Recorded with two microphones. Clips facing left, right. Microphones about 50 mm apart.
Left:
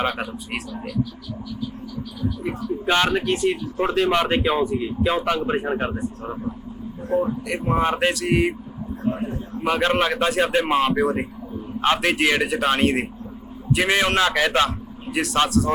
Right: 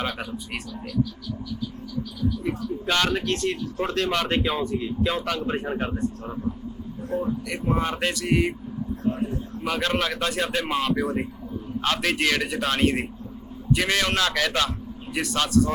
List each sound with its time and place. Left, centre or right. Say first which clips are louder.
0.0 s speech: left 5 dB; centre
2.4 s a man's voice: left 2 dB; centre
8.1 s speech: left 3 dB; centre
9.0 s a man's voice: left 2 dB; centre
15.0 s speech: left 5 dB; centre